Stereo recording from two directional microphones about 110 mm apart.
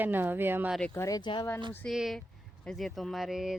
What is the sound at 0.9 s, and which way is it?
Speech, 25° left (ahead or behind).